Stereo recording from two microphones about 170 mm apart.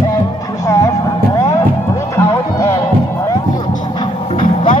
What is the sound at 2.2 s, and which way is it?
Music, 20° left (ahead or behind).